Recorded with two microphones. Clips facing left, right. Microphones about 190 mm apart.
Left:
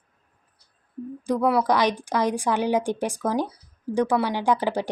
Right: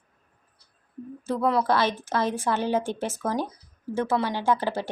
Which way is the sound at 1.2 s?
15° left (ahead or behind).